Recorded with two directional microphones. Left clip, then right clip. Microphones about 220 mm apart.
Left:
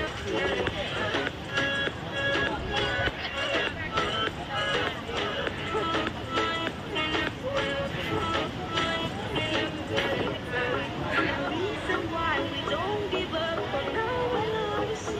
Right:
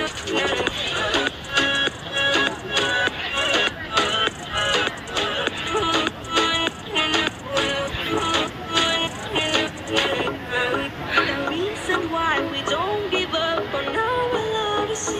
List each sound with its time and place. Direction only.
0.0 s music: 20° right (ahead or behind)